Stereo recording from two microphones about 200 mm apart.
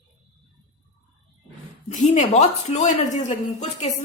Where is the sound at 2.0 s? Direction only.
35° left (ahead or behind).